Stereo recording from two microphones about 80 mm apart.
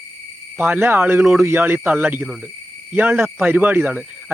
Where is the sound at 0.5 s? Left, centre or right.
Right.